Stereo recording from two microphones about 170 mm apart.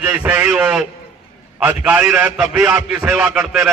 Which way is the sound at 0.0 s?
5° right (ahead or behind).